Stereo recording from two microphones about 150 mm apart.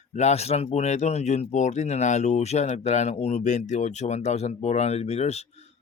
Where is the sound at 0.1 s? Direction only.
45° left (ahead or behind).